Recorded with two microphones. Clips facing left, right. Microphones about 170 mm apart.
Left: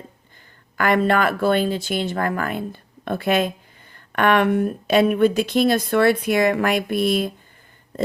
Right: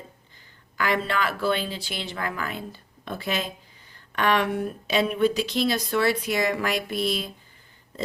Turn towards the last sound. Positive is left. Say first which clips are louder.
# left 7 dB
turn(degrees=55)  # may be behind; listen again after turning